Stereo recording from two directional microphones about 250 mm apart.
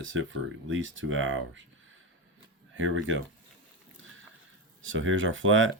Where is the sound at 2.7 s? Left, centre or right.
Right.